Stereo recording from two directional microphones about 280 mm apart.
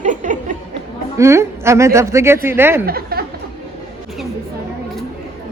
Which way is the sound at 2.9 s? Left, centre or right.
Right.